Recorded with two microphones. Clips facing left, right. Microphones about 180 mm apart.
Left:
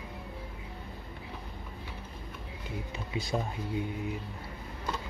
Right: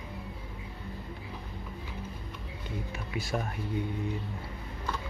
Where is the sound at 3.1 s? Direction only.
20° left (ahead or behind).